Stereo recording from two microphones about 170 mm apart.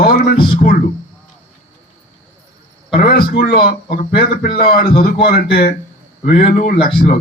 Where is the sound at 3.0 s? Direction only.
60° left (ahead or behind).